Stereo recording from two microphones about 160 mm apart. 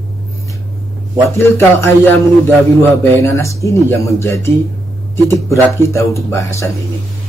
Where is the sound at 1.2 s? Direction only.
15° left (ahead or behind).